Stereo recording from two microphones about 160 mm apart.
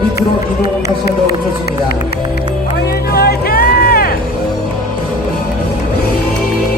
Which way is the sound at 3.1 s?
70° left (ahead or behind).